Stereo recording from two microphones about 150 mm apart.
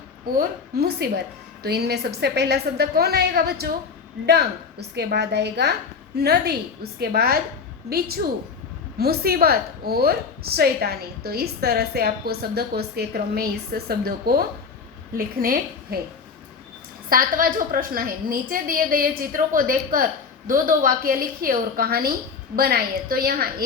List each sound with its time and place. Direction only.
0.3 s a woman's voice: 85° right
15.1 s a woman's voice: 75° right (ahead or behind)
17.1 s a woman's voice: 70° right (ahead or behind)